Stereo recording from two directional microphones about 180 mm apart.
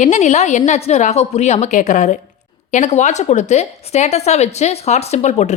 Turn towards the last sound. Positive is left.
turn(degrees=40)  # may be behind; listen again after turning